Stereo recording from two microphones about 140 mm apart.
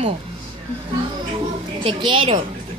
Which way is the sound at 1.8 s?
35° right (ahead or behind).